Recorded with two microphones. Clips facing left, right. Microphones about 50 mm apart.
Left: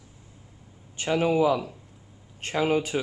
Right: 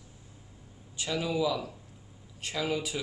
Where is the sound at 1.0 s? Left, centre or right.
Left.